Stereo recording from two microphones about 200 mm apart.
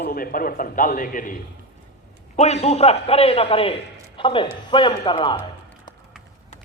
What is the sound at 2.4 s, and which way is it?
A man's voice, 35° left (ahead or behind).